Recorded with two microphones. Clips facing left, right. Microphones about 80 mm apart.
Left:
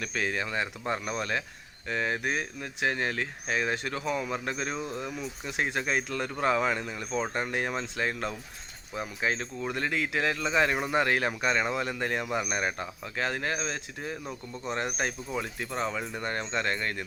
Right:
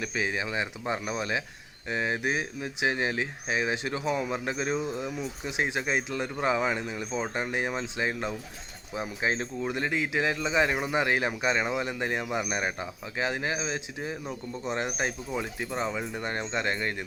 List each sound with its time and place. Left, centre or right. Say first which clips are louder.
0.0 s speech: right 1 dB; centre
9.0 s speech: right 1 dB; right
9.6 s speech: right 1 dB; centre